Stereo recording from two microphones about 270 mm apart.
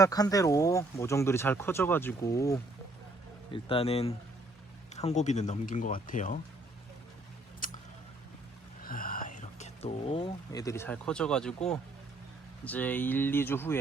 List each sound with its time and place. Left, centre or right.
0.0 s speech: centre; by 6.4 s left
8.8 s speech: left; by 13.7 s centre